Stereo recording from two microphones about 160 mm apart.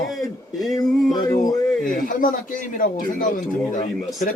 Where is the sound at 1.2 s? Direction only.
20° left (ahead or behind).